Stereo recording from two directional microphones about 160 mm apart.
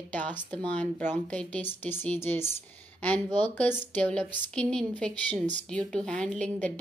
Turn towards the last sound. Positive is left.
turn(degrees=5)  # may be behind; listen again after turning